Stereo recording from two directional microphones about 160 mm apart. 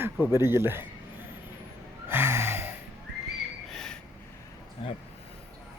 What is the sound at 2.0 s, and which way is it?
Gasp, 15° right (ahead or behind).